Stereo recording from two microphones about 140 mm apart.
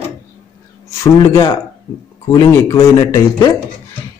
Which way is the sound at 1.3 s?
20° left (ahead or behind).